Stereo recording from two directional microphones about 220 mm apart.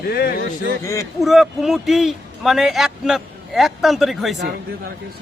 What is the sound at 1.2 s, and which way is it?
A man's voice, centre (ahead or behind).